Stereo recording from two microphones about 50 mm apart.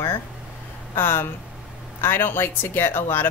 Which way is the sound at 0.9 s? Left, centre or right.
Left.